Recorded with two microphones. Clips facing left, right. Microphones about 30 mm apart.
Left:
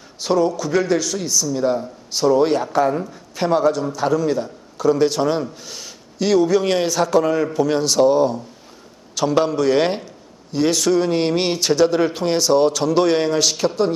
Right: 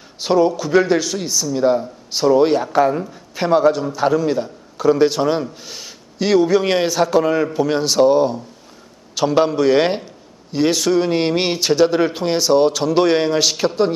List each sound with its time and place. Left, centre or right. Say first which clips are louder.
0.2 s a man's voice: right 3 dB; centre